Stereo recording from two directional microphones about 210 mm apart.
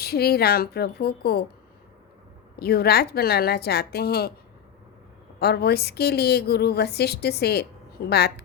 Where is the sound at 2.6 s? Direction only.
50° left (ahead or behind).